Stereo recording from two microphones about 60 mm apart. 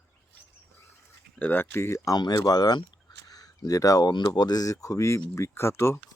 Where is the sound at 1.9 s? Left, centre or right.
Left.